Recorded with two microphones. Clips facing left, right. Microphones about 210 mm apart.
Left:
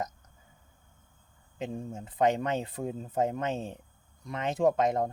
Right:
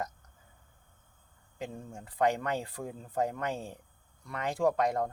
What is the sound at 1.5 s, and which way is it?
Speech, 20° left (ahead or behind).